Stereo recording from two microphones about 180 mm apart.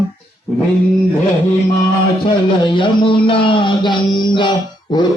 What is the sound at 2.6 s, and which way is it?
Speech, 25° left (ahead or behind).